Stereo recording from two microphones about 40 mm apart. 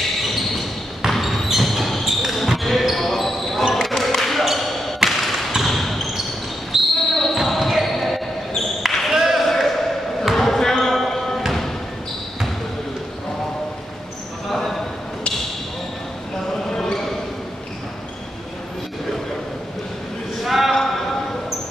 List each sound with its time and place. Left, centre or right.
1.1 s basketball bounce: centre
5.0 s thump: centre
5.7 s basketball bounce: centre
6.7 s basketball bounce: centre
7.2 s basketball bounce: centre
9.1 s basketball bounce: centre
14.5 s a sound: centre
16.5 s basketball bounce: centre
20.4 s a sound: centre
20.7 s a sound: centre